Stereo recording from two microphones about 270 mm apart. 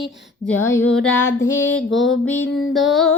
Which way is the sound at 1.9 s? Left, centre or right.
Left.